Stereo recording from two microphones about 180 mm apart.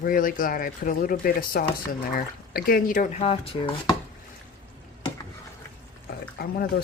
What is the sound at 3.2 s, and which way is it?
Dishes, 30° left (ahead or behind).